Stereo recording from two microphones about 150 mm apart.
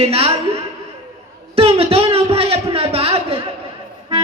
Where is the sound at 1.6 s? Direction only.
40° right (ahead or behind).